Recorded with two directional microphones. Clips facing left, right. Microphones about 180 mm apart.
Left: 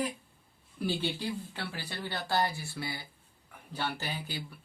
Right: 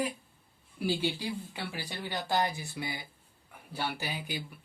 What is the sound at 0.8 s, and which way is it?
Speech, 10° right (ahead or behind).